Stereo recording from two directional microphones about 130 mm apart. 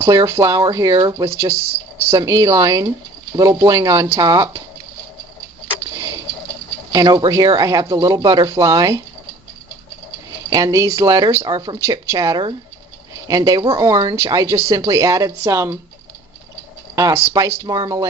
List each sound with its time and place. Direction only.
0.0 s speech: 25° right (ahead or behind)
5.9 s a sound: 25° right (ahead or behind)
6.9 s speech: 30° right (ahead or behind)
10.5 s speech: 25° right (ahead or behind)
11.8 s speech: 25° right (ahead or behind)
16.9 s speech: 25° right (ahead or behind)